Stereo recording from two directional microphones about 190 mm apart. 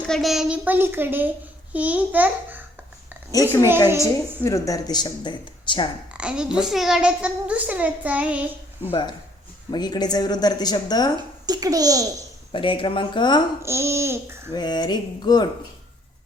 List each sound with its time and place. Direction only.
0.1 s a woman's voice: centre (ahead or behind)
3.3 s a woman's voice: 20° left (ahead or behind)
6.1 s a child's voice: 5° right (ahead or behind)
8.8 s speech: 25° left (ahead or behind)
11.4 s speech: 20° right (ahead or behind)
12.5 s speech: 25° left (ahead or behind)
13.6 s a woman's voice: 15° right (ahead or behind)
14.5 s speech: 20° left (ahead or behind)